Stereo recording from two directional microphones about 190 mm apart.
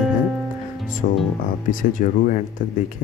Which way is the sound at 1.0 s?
40° left (ahead or behind).